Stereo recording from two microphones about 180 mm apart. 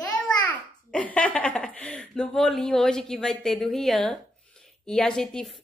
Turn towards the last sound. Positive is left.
turn(degrees=5)  # may be behind; listen again after turning